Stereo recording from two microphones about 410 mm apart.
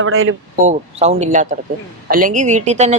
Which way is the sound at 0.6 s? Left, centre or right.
Centre.